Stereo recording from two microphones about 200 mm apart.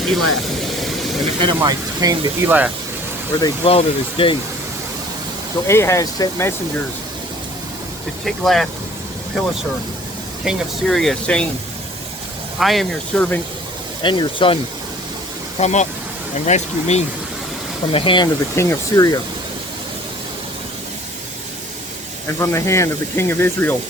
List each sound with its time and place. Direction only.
1.4 s speech: 20° right (ahead or behind)
3.4 s speech: 30° left (ahead or behind)
5.6 s speech: 15° left (ahead or behind)
8.2 s speech: centre (ahead or behind)
10.4 s speech: centre (ahead or behind)
12.5 s speech: centre (ahead or behind)
14.0 s speech: 25° left (ahead or behind)
22.4 s speech: 15° left (ahead or behind)